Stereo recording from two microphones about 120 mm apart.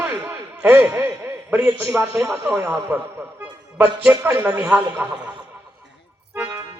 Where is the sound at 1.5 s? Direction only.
20° right (ahead or behind).